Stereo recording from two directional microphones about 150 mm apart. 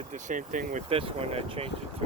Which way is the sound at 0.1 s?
60° right (ahead or behind).